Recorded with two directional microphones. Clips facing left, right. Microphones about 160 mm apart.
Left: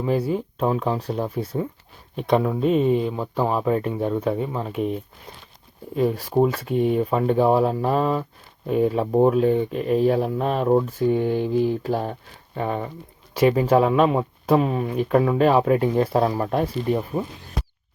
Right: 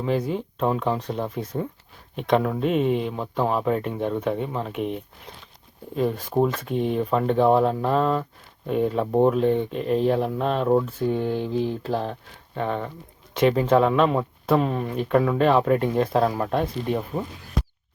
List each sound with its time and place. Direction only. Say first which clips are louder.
0.0 s speech: left 2 dB; 5° left (ahead or behind)
2.6 s speech: left 3 dB; 5° right (ahead or behind)
6.0 s speech: left 2 dB; 5° left (ahead or behind)